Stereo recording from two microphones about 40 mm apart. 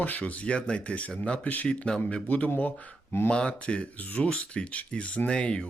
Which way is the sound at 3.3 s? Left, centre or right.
Left.